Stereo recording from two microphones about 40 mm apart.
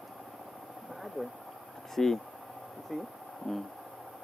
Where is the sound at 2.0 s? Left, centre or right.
Centre.